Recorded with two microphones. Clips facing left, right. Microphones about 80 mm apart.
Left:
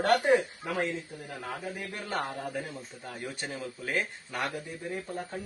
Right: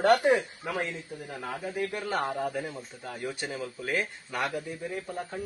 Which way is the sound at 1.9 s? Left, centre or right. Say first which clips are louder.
Right 4 dB; centre.